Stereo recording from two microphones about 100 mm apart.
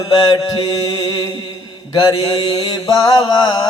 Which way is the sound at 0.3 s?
45° left (ahead or behind).